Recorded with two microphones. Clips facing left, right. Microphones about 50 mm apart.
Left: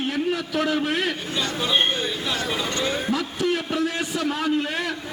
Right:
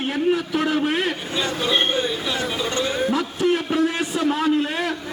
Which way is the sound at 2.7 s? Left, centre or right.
Centre.